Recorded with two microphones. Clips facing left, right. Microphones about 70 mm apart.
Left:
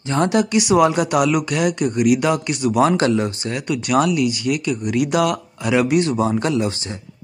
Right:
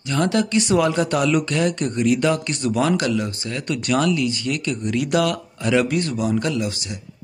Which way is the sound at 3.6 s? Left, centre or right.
Centre.